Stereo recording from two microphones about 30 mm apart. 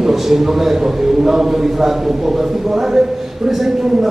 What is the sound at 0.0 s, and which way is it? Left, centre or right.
A man's voice, centre.